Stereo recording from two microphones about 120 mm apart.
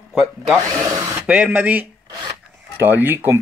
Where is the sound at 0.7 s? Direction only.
25° right (ahead or behind).